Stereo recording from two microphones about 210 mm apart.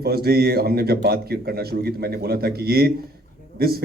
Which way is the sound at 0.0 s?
45° right (ahead or behind).